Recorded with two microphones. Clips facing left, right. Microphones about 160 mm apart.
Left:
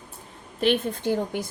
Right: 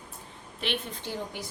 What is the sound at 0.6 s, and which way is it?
Speech, 50° left (ahead or behind).